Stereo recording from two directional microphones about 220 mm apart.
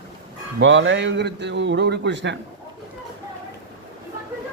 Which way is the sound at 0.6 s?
55° right (ahead or behind).